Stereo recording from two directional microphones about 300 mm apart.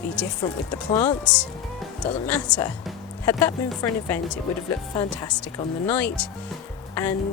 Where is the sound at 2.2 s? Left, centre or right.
Centre.